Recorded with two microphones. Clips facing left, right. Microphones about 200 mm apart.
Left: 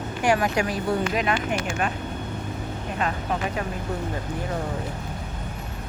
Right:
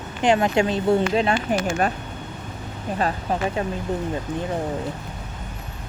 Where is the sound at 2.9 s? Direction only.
35° right (ahead or behind).